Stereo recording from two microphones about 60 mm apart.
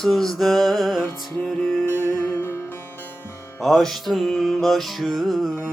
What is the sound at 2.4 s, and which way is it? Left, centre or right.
Music, left.